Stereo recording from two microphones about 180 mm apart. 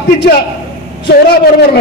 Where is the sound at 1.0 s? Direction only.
60° left (ahead or behind).